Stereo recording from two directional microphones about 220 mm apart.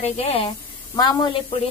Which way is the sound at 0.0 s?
25° left (ahead or behind).